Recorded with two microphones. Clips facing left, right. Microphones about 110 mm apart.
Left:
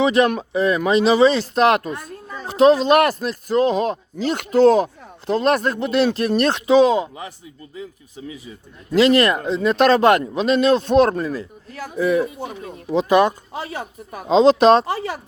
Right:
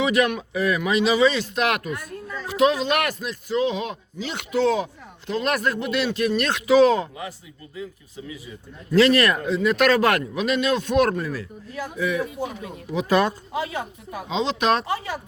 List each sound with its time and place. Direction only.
0.0 s speech: 30° left (ahead or behind)
8.9 s speech: 20° left (ahead or behind)
11.9 s speech: 35° left (ahead or behind)
13.1 s speech: 20° left (ahead or behind)
14.1 s speech: 45° left (ahead or behind)